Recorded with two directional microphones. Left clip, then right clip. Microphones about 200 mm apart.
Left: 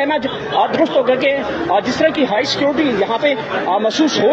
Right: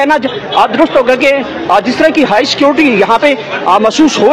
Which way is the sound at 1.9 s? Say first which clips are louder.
Right 6 dB; 25° right (ahead or behind).